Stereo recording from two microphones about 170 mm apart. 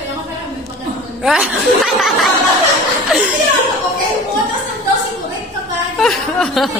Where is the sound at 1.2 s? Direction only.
Centre (ahead or behind).